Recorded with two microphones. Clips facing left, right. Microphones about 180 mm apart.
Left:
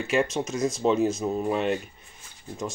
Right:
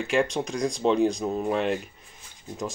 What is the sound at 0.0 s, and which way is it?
Speech, centre (ahead or behind).